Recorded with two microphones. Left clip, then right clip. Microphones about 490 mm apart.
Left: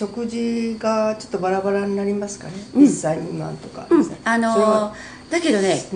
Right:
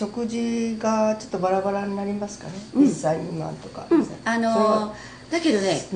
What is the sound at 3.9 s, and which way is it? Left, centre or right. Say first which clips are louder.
A woman's voice: left 4 dB; left.